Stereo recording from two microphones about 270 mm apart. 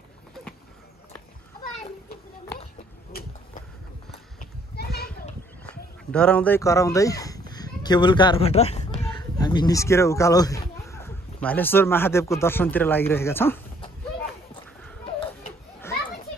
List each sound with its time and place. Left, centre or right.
4.1 s clip-clop: left
6.1 s speech: centre